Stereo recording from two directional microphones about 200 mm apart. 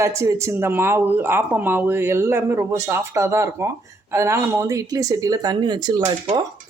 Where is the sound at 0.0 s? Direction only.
15° right (ahead or behind).